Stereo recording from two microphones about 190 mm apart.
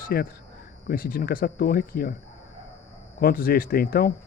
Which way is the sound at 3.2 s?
50° left (ahead or behind).